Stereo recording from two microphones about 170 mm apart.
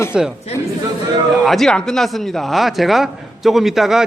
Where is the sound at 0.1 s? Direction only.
5° right (ahead or behind).